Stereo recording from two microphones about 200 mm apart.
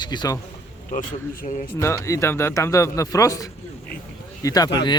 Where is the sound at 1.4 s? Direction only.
40° left (ahead or behind).